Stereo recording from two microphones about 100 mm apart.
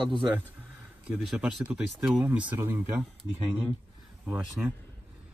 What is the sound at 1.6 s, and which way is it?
Speech, 10° right (ahead or behind).